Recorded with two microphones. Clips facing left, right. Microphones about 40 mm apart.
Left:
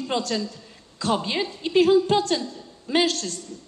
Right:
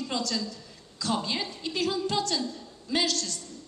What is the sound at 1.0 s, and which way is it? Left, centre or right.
A woman's voice, left.